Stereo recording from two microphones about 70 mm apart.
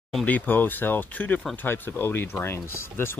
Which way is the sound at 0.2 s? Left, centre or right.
Left.